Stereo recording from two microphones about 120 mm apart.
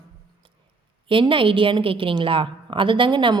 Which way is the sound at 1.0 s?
45° right (ahead or behind).